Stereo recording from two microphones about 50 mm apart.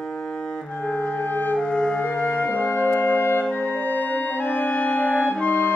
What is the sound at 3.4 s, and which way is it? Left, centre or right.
Music, left.